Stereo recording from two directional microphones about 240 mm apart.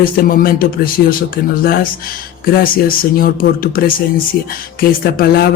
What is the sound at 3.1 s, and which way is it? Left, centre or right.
Speech, left.